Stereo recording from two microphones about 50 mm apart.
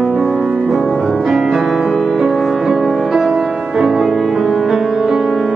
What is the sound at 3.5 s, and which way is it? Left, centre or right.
Music, centre.